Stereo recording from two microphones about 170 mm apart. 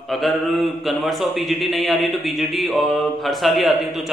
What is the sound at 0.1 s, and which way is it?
A man's voice, centre (ahead or behind).